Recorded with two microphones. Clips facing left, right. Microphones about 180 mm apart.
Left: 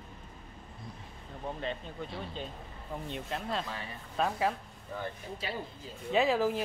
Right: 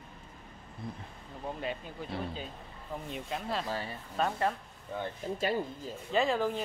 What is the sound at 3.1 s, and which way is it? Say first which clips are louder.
Speech: even; centre (ahead or behind).